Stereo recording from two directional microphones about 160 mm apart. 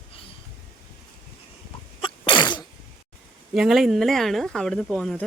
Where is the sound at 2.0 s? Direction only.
30° left (ahead or behind).